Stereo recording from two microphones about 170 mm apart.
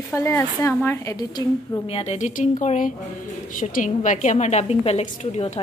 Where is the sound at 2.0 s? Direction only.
40° left (ahead or behind).